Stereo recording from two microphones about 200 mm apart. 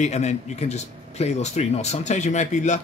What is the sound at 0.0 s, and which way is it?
Speech, 35° left (ahead or behind).